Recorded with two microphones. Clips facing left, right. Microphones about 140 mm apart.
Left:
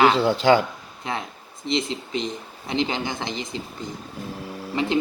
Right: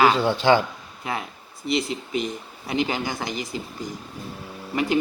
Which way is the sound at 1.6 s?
25° left (ahead or behind).